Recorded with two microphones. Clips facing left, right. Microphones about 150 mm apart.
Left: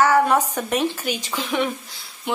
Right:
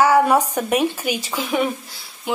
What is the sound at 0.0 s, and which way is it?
A woman's voice, 10° right (ahead or behind).